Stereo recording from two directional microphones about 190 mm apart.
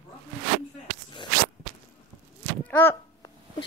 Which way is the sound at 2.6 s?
10° left (ahead or behind).